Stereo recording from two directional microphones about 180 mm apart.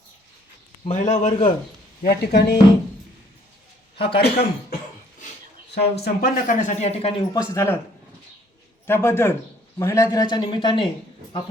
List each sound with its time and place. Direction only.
0.9 s a man's voice: 40° left (ahead or behind)
2.0 s speech: 65° left (ahead or behind)
3.9 s speech: 65° left (ahead or behind)
5.7 s speech: 60° left (ahead or behind); by 7.2 s 35° left (ahead or behind)
7.3 s a man's voice: 15° left (ahead or behind)
8.9 s a man's voice: 15° left (ahead or behind); by 11.4 s 30° left (ahead or behind)